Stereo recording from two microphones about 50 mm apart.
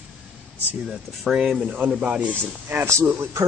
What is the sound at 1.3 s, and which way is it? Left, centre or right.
Speech, centre.